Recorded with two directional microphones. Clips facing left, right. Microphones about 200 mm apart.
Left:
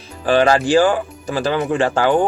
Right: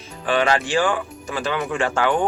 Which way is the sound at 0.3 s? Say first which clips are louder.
Left 6 dB; 40° left (ahead or behind).